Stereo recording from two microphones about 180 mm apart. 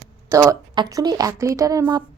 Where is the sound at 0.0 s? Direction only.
15° right (ahead or behind).